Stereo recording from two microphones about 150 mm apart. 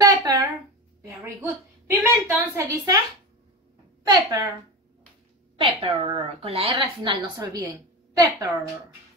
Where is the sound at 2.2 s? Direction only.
15° right (ahead or behind).